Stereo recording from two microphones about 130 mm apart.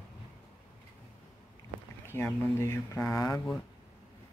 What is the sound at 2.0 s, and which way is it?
Speech, 15° left (ahead or behind).